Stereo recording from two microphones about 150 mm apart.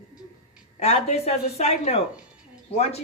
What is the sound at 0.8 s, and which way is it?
Speech, 45° left (ahead or behind).